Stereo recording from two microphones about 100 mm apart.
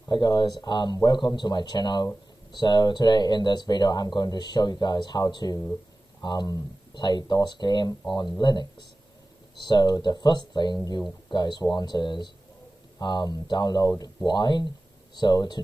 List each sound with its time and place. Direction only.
0.1 s speech: 45° left (ahead or behind)